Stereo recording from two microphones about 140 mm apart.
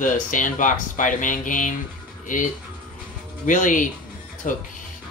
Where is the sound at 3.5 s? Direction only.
70° left (ahead or behind).